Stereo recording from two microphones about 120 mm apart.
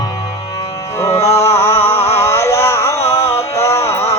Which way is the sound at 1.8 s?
60° left (ahead or behind).